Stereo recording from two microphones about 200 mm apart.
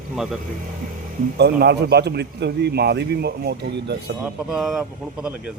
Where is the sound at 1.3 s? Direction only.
55° right (ahead or behind).